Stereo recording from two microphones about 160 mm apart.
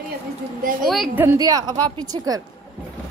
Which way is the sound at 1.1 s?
15° right (ahead or behind).